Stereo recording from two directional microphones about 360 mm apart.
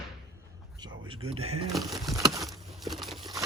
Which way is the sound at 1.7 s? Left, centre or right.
Centre.